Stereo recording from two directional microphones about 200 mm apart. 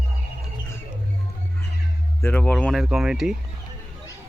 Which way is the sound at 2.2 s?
5° left (ahead or behind).